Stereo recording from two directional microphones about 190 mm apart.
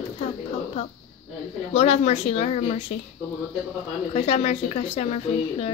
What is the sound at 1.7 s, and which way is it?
A woman's voice, 35° left (ahead or behind).